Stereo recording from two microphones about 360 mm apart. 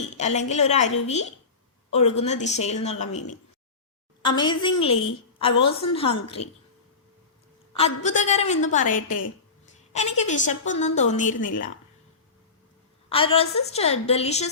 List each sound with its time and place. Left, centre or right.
0.2 s a woman's voice: centre
4.2 s a woman's voice: centre
7.7 s a woman's voice: centre
10.2 s a woman's voice: centre
13.1 s a woman's voice: centre